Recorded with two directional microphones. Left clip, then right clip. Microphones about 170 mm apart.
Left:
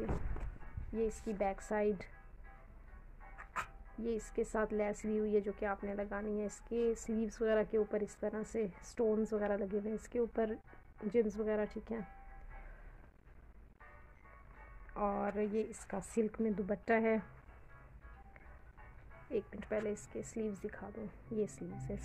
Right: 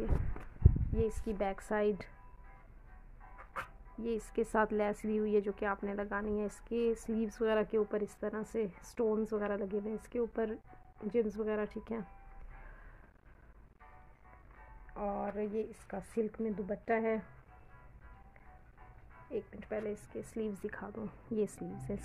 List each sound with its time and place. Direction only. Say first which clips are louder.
0.9 s speech: right 1 dB; 20° right (ahead or behind)
4.0 s a woman's voice: right 1 dB; 10° right (ahead or behind)
4.3 s speech: right 6 dB; 25° right (ahead or behind)
15.0 s a woman's voice: left 1 dB; 10° left (ahead or behind)
19.3 s a woman's voice: left 1 dB; 15° left (ahead or behind)
19.8 s speech: even; centre (ahead or behind); by 22.0 s 25° right (ahead or behind)